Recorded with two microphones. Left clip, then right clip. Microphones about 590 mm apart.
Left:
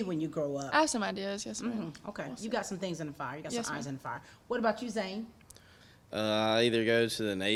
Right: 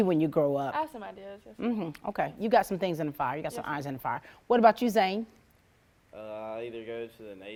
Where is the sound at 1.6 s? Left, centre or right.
Right.